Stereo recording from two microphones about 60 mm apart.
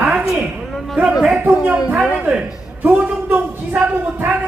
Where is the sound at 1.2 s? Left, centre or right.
Centre.